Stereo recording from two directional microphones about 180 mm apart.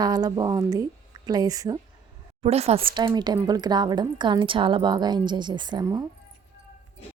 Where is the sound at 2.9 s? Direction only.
25° right (ahead or behind).